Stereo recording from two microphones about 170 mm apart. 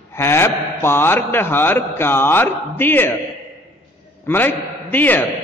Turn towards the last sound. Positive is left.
turn(degrees=10)  # may be behind; listen again after turning